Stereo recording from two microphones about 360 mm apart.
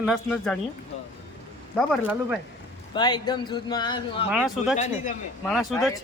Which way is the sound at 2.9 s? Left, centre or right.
Centre.